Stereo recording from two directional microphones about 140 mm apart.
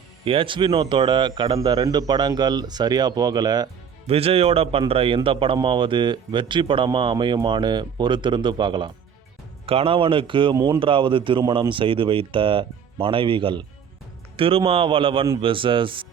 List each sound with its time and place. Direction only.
0.3 s speech: 40° right (ahead or behind)
4.0 s a man's voice: 45° right (ahead or behind)